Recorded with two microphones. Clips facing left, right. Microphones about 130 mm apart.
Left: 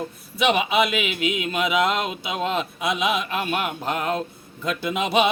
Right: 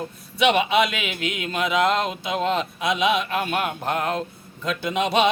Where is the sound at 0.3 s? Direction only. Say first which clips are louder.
Right 1 dB; 5° left (ahead or behind).